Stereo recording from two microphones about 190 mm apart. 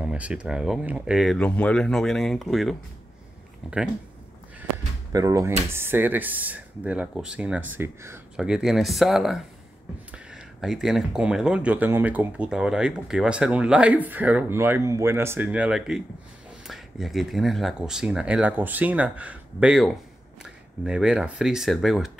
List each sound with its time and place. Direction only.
0.0 s speech: 5° right (ahead or behind)
5.1 s speech: 15° right (ahead or behind)
8.4 s speech: 5° right (ahead or behind)